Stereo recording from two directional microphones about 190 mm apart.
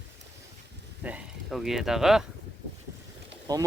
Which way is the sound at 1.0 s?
5° right (ahead or behind).